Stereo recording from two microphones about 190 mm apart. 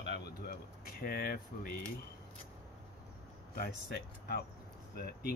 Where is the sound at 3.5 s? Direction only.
50° left (ahead or behind).